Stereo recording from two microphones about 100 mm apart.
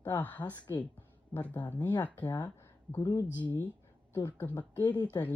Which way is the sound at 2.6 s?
35° left (ahead or behind).